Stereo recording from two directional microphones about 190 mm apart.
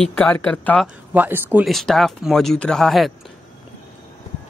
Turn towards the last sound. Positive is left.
turn(degrees=0)  # may be behind; listen again after turning